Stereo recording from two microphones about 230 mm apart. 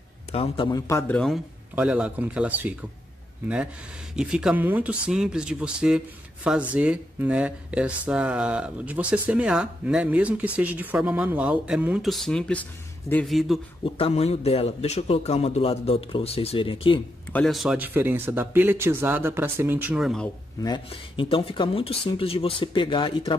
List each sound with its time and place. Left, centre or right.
0.3 s speech: left; by 2.8 s centre
4.2 s speech: centre
13.8 s a man's voice: left
17.3 s speech: centre
20.6 s a man's voice: left